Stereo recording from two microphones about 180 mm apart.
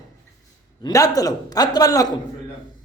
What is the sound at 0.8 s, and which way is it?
A man's voice, 20° left (ahead or behind).